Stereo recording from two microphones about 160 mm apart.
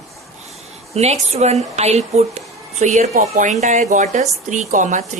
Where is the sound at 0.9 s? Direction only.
40° right (ahead or behind).